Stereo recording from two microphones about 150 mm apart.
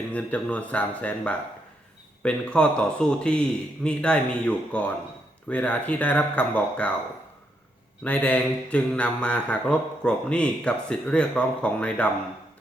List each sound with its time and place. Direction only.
0.1 s mantra: 10° left (ahead or behind)
8.0 s mantra: 10° left (ahead or behind)